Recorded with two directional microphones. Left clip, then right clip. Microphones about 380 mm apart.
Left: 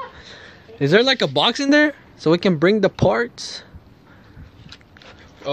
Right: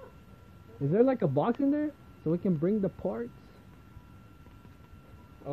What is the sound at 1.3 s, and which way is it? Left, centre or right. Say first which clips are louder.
Speech: left 13 dB; centre.